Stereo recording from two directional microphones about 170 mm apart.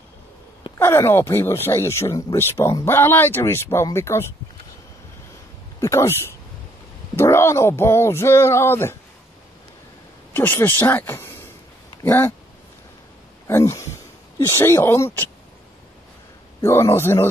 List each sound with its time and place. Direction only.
0.7 s speech: 15° left (ahead or behind)
5.8 s speech: 15° left (ahead or behind)
7.2 s speech: 15° left (ahead or behind)
10.3 s speech: 10° left (ahead or behind)
13.5 s speech: 15° left (ahead or behind)
16.6 s speech: 15° left (ahead or behind)